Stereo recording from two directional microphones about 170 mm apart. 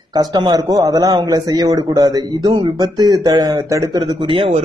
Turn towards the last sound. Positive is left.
turn(degrees=-30)  # may be behind; listen again after turning